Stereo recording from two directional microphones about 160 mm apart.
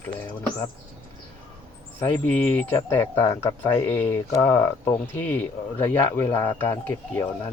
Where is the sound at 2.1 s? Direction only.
10° left (ahead or behind).